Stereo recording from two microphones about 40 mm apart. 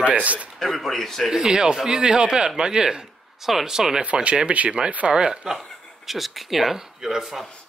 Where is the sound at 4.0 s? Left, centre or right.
Right; by 5.6 s centre.